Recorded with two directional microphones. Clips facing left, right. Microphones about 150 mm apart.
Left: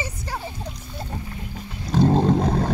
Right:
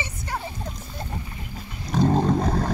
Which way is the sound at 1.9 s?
Centre (ahead or behind).